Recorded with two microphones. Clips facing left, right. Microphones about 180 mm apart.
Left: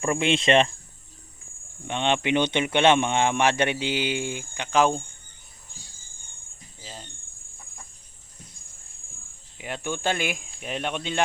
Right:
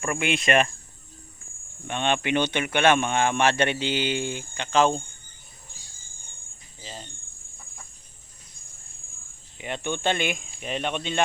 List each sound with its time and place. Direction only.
0.0 s speech: 25° left (ahead or behind)
1.9 s speech: 20° left (ahead or behind)
6.8 s speech: centre (ahead or behind)
9.6 s speech: 5° left (ahead or behind)